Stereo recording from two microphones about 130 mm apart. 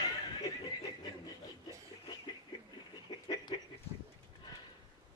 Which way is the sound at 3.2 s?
35° left (ahead or behind).